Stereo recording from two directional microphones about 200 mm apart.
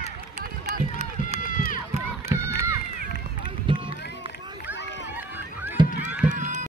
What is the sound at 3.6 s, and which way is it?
Run, 25° right (ahead or behind).